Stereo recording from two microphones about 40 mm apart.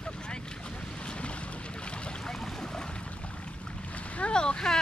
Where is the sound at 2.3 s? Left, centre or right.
Centre.